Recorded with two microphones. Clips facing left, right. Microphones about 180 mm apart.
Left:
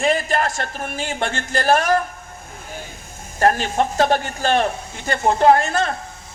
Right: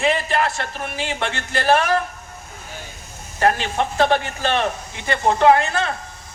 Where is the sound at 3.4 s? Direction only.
45° left (ahead or behind).